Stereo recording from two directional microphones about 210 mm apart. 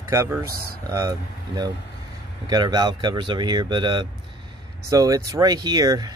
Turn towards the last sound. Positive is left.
turn(degrees=-20)  # may be behind; listen again after turning